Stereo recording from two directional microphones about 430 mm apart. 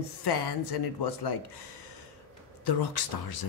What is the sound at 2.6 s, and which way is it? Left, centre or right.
Speech, left.